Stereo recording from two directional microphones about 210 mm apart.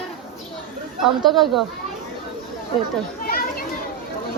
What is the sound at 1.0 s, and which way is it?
Speech, centre (ahead or behind).